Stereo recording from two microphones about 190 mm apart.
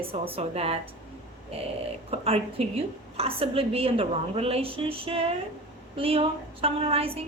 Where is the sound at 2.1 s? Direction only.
30° right (ahead or behind).